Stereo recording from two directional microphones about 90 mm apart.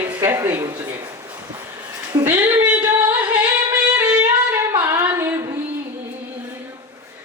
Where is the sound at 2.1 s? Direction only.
50° right (ahead or behind).